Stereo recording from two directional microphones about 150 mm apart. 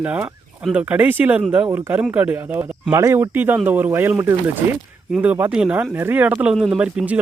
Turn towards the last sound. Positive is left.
turn(degrees=-5)  # may be behind; listen again after turning